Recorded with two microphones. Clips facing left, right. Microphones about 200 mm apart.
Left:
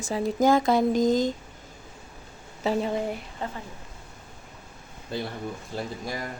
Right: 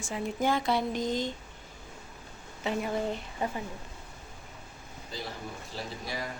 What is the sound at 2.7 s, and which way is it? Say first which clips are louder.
Speech: left 6 dB; 30° left (ahead or behind).